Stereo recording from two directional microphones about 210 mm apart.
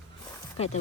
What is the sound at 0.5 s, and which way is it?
Speech, 30° left (ahead or behind).